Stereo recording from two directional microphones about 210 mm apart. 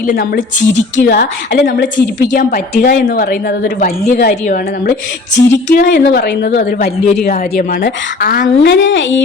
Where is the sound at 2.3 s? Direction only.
40° left (ahead or behind).